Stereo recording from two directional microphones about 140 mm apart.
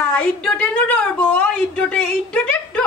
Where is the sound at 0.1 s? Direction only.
5° left (ahead or behind).